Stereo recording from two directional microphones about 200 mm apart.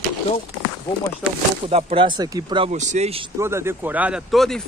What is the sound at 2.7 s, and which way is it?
Speech, 35° right (ahead or behind).